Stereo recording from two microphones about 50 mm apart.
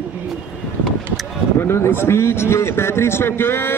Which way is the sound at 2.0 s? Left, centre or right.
Left.